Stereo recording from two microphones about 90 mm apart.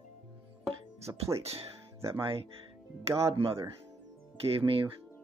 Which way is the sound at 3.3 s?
90° right.